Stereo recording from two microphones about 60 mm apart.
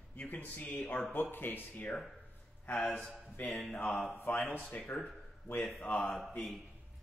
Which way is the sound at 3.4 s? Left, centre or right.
Left.